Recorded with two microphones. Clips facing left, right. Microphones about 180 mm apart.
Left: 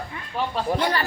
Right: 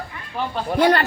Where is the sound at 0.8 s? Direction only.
65° right (ahead or behind).